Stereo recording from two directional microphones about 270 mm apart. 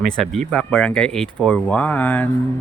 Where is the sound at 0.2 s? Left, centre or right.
Centre.